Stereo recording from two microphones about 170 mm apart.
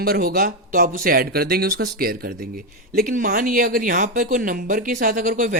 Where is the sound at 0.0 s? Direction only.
60° right (ahead or behind).